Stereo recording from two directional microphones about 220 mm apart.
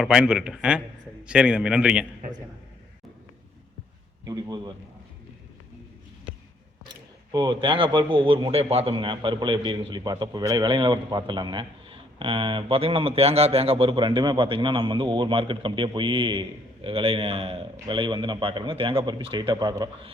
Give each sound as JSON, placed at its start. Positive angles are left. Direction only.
{"t": 0.0, "sound": "a man's voice", "side_deg": -5}
{"t": 4.3, "sound": "a man's voice", "side_deg": -20}
{"t": 7.3, "sound": "a man's voice", "side_deg": -20}